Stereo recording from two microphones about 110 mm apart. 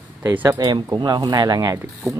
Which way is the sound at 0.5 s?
40° right (ahead or behind).